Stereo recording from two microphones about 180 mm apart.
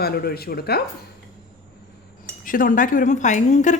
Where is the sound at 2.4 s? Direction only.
50° left (ahead or behind).